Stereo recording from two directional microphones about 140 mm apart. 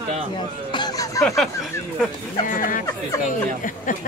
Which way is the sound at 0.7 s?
30° left (ahead or behind).